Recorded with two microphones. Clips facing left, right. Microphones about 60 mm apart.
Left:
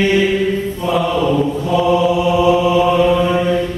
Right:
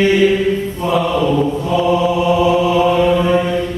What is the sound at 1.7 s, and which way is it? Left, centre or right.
Chant, centre.